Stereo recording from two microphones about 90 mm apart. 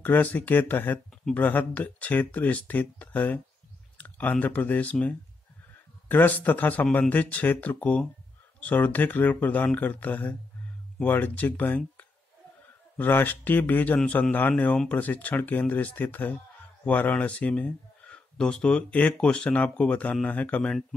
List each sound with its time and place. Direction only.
0.0 s speech: 20° left (ahead or behind)